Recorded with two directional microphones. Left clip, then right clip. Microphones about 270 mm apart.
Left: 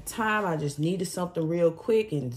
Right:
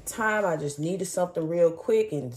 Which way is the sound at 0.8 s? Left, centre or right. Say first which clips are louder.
Right 3 dB; centre.